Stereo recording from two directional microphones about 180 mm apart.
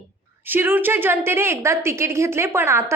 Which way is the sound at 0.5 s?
10° right (ahead or behind).